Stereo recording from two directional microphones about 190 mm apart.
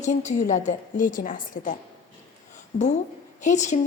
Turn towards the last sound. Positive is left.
turn(degrees=40)  # may be behind; listen again after turning